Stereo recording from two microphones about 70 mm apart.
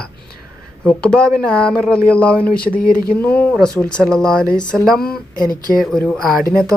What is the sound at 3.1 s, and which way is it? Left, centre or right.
Speech, left.